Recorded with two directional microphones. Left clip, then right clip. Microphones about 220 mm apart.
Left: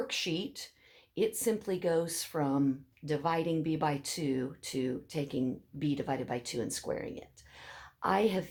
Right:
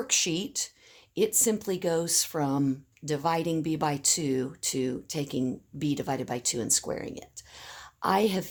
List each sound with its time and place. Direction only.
0.1 s speech: 50° right (ahead or behind)